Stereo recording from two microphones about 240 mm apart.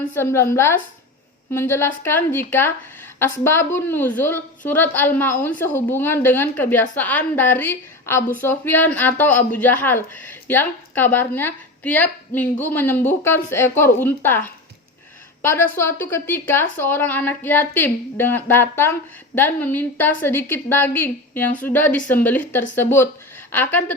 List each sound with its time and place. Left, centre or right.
0.1 s a woman's voice: centre